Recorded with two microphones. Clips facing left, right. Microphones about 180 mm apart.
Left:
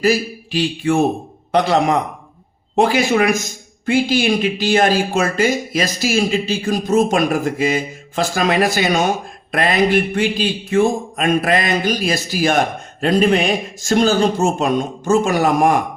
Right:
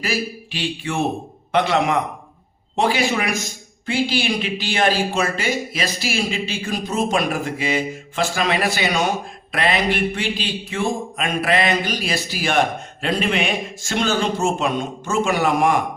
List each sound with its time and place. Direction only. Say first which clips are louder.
0.0 s speech: left 8 dB; 40° left (ahead or behind)